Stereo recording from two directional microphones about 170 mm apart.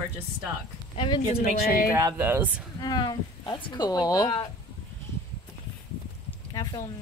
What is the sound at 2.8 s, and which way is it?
Speech, 25° left (ahead or behind).